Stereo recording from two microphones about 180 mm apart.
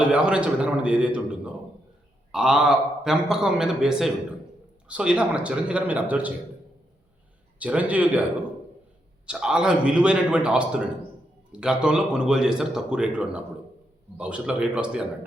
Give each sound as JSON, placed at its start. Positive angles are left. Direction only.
{"t": 0.0, "sound": "a man's voice", "side_deg": -5}
{"t": 7.6, "sound": "a man's voice", "side_deg": -10}
{"t": 9.2, "sound": "speech", "side_deg": -5}